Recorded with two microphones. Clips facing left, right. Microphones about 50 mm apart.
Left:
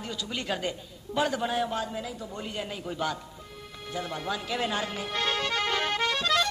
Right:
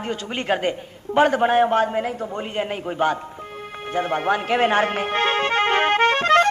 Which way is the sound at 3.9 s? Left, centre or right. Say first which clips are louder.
Right 11 dB; right.